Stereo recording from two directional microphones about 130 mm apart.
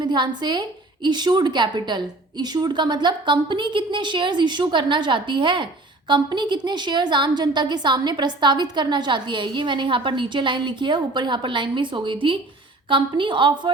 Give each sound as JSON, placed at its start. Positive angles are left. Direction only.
{"t": 0.0, "sound": "a woman's voice", "side_deg": -35}